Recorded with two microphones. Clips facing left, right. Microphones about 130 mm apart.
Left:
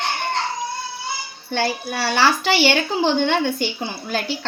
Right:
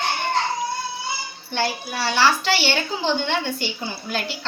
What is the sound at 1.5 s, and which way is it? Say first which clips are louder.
A woman's voice: left 3 dB; 60° left (ahead or behind).